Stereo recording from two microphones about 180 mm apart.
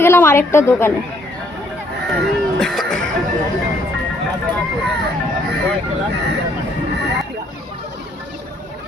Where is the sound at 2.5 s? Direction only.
Centre (ahead or behind).